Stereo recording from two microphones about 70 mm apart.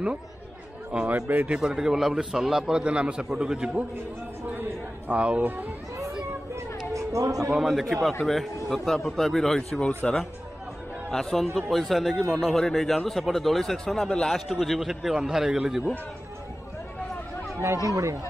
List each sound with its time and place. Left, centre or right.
0.9 s a man's voice: centre
1.5 s a man's voice: centre
4.6 s a sound: right
6.9 s a sound: right
7.5 s a man's voice: centre
17.8 s speech: right